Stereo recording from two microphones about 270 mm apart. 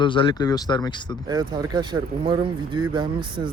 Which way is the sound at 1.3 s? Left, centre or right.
Centre.